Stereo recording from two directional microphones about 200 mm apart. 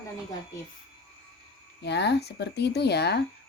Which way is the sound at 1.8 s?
55° left (ahead or behind).